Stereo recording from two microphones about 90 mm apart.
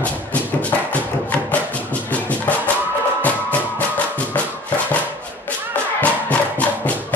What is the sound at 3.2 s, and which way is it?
Music, 15° left (ahead or behind).